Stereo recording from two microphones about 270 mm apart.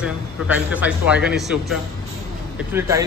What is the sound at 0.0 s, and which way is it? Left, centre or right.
A man's voice, centre.